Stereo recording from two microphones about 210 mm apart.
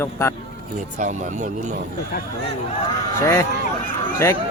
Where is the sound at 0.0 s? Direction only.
10° left (ahead or behind).